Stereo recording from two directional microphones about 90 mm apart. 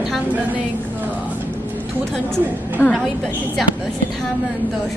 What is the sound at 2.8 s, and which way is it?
Speech, 30° left (ahead or behind).